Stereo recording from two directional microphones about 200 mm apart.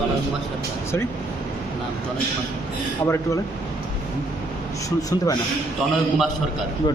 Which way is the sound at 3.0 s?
15° left (ahead or behind).